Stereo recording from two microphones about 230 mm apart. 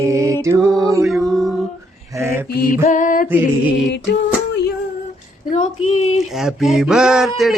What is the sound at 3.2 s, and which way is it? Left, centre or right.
Music, centre.